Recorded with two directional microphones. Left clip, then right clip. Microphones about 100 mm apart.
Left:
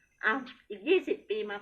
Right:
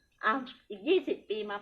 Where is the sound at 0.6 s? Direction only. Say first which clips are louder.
Left 1 dB; 20° right (ahead or behind).